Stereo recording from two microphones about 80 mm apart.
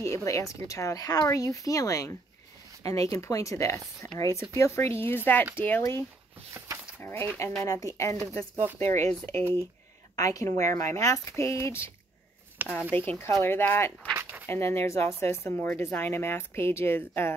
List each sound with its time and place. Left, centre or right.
0.0 s a woman's voice: left
7.0 s a woman's voice: left
10.1 s a woman's voice: left
12.6 s speech: right
12.9 s a woman's voice: left